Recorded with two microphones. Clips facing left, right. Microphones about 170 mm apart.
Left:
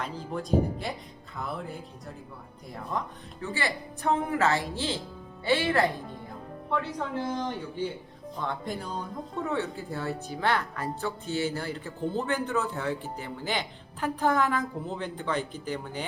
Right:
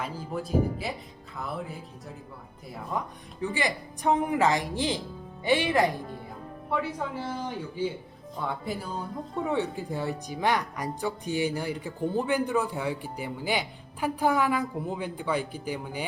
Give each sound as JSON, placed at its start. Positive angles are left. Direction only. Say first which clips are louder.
{"t": 0.0, "sound": "speech", "louder": "right 1 dB", "side_deg": -5}
{"t": 1.4, "sound": "music", "louder": "even", "side_deg": 0}
{"t": 2.9, "sound": "speech", "louder": "right 1 dB", "side_deg": -10}